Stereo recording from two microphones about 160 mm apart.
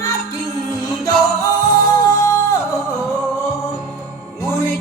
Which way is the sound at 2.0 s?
20° left (ahead or behind).